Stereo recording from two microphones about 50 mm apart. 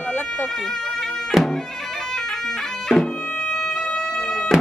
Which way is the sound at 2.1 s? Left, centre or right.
Centre.